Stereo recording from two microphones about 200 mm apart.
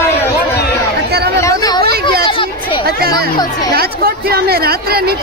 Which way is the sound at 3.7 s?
50° right (ahead or behind).